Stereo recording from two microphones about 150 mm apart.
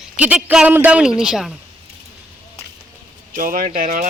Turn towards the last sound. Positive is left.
turn(degrees=-70)  # may be behind; listen again after turning